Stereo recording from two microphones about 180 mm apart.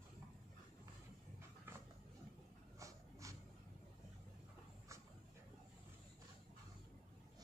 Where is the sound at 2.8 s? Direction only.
15° right (ahead or behind).